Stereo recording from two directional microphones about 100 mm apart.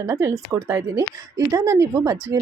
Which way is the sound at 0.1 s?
30° right (ahead or behind).